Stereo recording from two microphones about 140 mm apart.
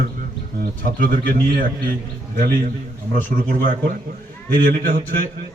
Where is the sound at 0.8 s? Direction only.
90° right.